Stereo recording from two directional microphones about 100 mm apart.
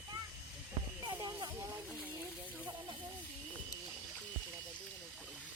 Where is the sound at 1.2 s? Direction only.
40° right (ahead or behind).